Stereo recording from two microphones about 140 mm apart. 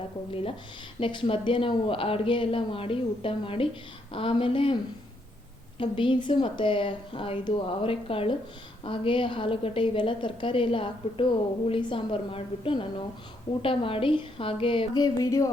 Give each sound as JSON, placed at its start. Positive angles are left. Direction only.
{"t": 0.3, "sound": "a woman's voice", "side_deg": 40}
{"t": 5.8, "sound": "a woman's voice", "side_deg": 35}